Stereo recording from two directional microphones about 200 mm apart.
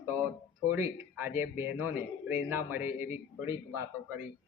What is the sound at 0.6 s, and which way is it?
A man's voice, 10° right (ahead or behind).